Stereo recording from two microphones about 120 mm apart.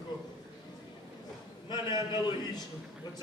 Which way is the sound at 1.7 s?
35° left (ahead or behind).